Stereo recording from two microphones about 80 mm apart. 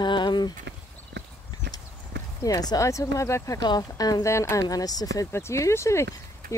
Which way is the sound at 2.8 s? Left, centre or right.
Left.